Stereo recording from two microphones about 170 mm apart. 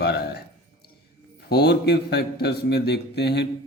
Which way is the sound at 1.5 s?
70° left (ahead or behind).